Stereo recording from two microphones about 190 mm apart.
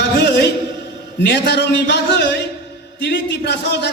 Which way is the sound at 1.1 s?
60° left (ahead or behind).